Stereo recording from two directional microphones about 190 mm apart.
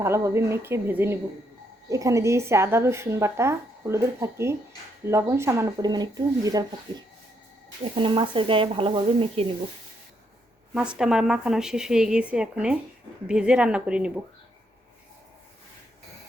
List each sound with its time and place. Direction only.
0.0 s a woman's voice: 15° right (ahead or behind); by 9.5 s 30° right (ahead or behind)
10.8 s speech: 5° right (ahead or behind)